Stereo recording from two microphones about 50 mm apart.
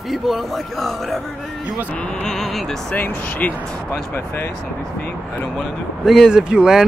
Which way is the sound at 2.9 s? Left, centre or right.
Left.